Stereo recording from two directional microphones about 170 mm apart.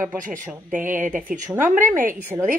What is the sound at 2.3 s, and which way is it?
Speech, 20° right (ahead or behind).